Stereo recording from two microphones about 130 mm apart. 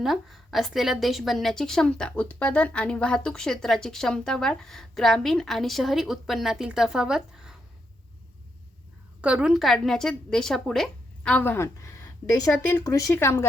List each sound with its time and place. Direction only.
0.0 s a woman's voice: centre (ahead or behind)
9.2 s a woman's voice: 5° right (ahead or behind); by 13.4 s 20° left (ahead or behind)